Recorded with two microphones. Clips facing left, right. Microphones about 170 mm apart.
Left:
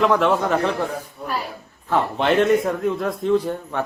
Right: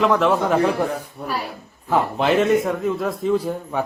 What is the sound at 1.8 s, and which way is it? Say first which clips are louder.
A man's voice: right 1 dB; 5° right (ahead or behind).